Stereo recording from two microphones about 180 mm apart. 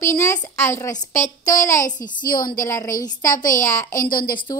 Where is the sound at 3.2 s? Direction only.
45° left (ahead or behind).